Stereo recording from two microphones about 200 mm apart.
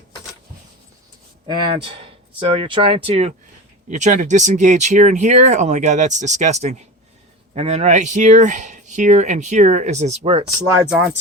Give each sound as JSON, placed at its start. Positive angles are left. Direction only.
{"t": 1.5, "sound": "speech", "side_deg": -25}